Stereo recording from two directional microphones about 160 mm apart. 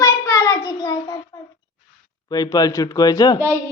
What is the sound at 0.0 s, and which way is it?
Child singing, 20° left (ahead or behind).